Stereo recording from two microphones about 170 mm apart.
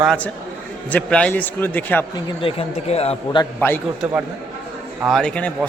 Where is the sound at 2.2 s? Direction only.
35° left (ahead or behind).